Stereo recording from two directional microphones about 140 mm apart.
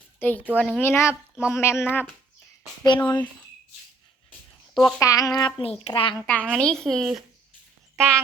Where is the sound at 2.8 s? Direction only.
30° left (ahead or behind).